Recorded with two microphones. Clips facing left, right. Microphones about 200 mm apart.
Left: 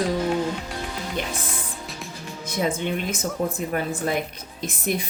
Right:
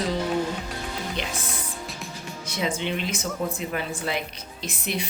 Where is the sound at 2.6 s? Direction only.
45° left (ahead or behind).